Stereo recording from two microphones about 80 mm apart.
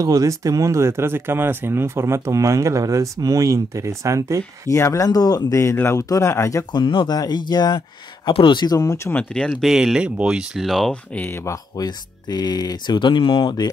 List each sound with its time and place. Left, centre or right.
0.0 s speech: right
4.6 s speech: left
6.7 s speech: left
7.2 s speech: left
8.3 s speech: left
8.6 s speech: left
9.5 s speech: centre
10.9 s speech: centre
11.8 s speech: left